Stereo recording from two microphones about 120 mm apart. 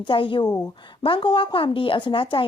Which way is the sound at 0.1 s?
45° left (ahead or behind).